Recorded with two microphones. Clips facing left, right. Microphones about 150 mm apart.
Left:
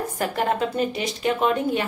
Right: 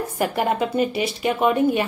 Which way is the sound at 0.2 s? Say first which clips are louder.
Right 2 dB; 10° right (ahead or behind).